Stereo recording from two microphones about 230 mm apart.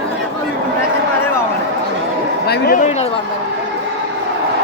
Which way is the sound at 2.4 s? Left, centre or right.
Left.